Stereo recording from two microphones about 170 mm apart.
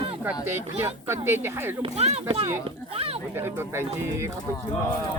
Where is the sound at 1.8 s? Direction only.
35° right (ahead or behind).